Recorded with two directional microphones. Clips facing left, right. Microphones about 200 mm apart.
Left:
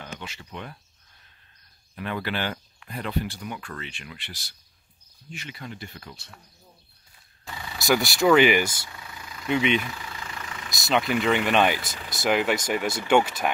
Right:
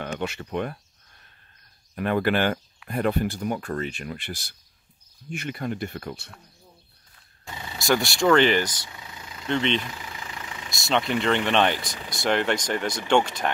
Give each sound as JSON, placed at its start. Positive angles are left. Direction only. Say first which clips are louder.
{"t": 0.0, "sound": "speech", "louder": "right 9 dB", "side_deg": -60}
{"t": 2.0, "sound": "speech", "louder": "right 7 dB", "side_deg": -50}
{"t": 7.4, "sound": "a sound", "louder": "even", "side_deg": -20}
{"t": 7.8, "sound": "speech", "louder": "left 1 dB", "side_deg": 0}
{"t": 8.8, "sound": "vehicle", "louder": "even", "side_deg": -20}
{"t": 9.5, "sound": "speech", "louder": "left 1 dB", "side_deg": 10}
{"t": 9.9, "sound": "vehicle", "louder": "even", "side_deg": -15}
{"t": 10.7, "sound": "speech", "louder": "even", "side_deg": 0}
{"t": 11.8, "sound": "speech", "louder": "right 1 dB", "side_deg": 25}
{"t": 12.2, "sound": "speech", "louder": "even", "side_deg": 5}